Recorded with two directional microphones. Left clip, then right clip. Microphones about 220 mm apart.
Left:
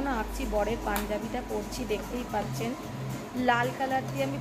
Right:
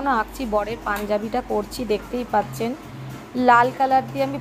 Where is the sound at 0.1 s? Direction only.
20° right (ahead or behind).